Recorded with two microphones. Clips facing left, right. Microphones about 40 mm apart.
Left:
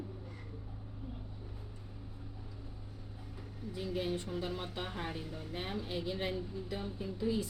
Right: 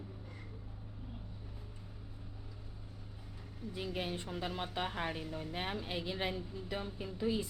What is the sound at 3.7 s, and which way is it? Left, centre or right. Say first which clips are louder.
A woman's voice: left 3 dB; right.